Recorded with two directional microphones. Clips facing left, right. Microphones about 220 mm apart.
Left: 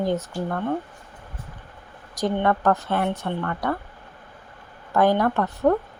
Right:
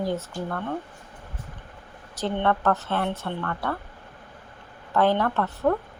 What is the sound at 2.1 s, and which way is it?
Speech, 10° left (ahead or behind).